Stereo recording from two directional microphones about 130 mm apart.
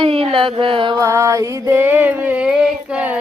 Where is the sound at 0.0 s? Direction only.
45° right (ahead or behind).